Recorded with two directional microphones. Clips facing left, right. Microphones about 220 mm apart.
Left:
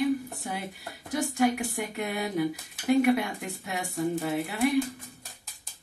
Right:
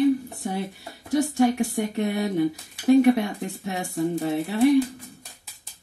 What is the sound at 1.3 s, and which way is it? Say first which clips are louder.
Speech: right 2 dB; 30° right (ahead or behind).